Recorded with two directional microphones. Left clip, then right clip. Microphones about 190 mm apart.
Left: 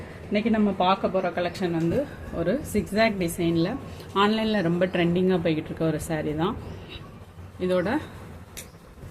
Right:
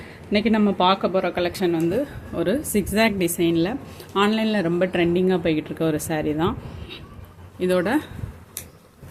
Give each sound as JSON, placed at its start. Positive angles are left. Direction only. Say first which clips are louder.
{"t": 0.3, "sound": "speech", "louder": "right 4 dB", "side_deg": -40}